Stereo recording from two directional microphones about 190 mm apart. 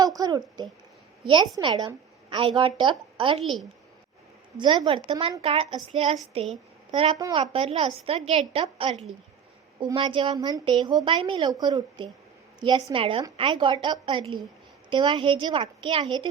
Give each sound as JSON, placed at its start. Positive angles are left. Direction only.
{"t": 0.2, "sound": "a woman's voice", "side_deg": -20}
{"t": 3.4, "sound": "a woman's voice", "side_deg": 0}
{"t": 4.5, "sound": "a woman's voice", "side_deg": -25}